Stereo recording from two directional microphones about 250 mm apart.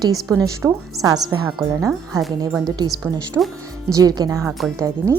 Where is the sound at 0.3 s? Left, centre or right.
Centre.